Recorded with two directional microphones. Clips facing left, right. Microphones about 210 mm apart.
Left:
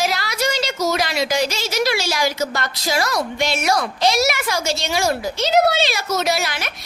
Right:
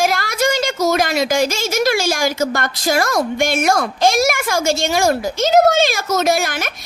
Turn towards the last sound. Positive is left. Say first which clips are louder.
# right 4 dB
turn(degrees=-50)  # may be behind; listen again after turning